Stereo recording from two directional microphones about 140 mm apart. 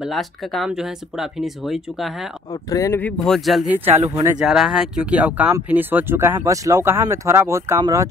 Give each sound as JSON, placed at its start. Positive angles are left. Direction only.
{"t": 0.0, "sound": "speech", "side_deg": 0}
{"t": 2.5, "sound": "speech", "side_deg": 25}
{"t": 3.0, "sound": "speech", "side_deg": 10}
{"t": 3.3, "sound": "speech", "side_deg": 0}